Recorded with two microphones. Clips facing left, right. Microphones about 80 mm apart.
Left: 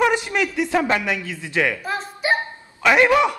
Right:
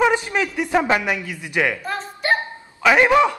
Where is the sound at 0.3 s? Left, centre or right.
Centre.